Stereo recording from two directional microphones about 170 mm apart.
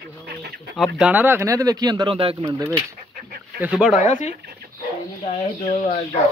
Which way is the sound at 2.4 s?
15° right (ahead or behind).